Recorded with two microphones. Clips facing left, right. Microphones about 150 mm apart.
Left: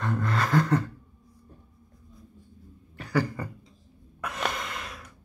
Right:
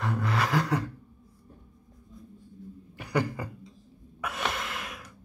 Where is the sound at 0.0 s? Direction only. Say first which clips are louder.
Left 1 dB; 5° right (ahead or behind).